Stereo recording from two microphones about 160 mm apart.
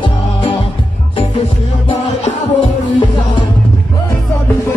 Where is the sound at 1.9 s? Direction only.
35° left (ahead or behind).